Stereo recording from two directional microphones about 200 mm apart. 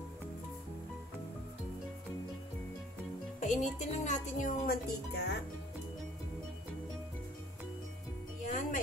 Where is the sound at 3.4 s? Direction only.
35° left (ahead or behind).